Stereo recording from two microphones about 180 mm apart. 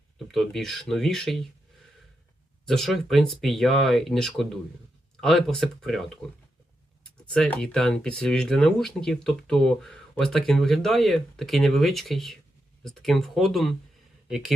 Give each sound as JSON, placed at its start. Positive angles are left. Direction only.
{"t": 0.3, "sound": "speech", "side_deg": 0}
{"t": 2.6, "sound": "speech", "side_deg": 0}
{"t": 7.3, "sound": "speech", "side_deg": 5}